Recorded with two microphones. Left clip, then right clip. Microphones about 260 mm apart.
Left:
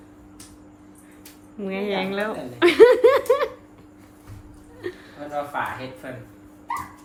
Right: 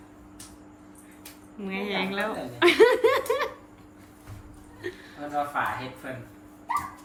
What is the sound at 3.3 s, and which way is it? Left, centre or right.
Dog, centre.